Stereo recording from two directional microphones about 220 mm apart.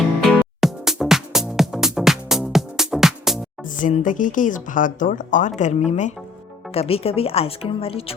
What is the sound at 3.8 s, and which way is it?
Speech, 35° left (ahead or behind).